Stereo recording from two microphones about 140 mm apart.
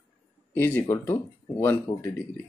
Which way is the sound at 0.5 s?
15° left (ahead or behind).